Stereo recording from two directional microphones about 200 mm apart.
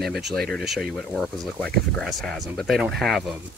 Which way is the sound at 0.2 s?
Centre (ahead or behind).